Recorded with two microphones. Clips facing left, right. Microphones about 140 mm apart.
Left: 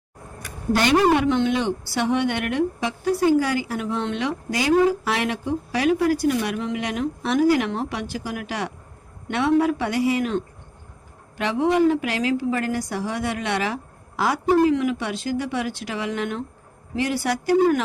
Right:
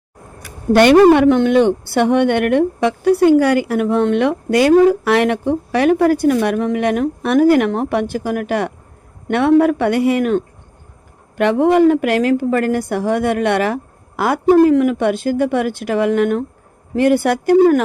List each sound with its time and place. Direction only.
0.7 s a woman's voice: 60° right (ahead or behind)